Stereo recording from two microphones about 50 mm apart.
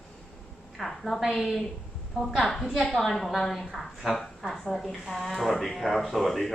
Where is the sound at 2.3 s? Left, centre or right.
Centre.